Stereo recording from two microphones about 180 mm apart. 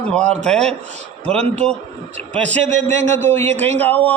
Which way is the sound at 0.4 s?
5° left (ahead or behind).